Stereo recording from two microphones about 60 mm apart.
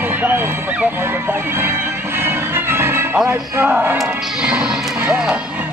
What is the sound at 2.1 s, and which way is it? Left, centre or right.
Music, right.